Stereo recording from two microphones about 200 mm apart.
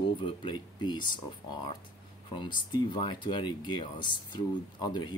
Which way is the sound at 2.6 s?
20° left (ahead or behind).